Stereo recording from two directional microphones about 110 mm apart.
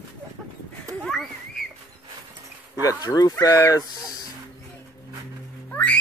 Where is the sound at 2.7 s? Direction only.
35° left (ahead or behind).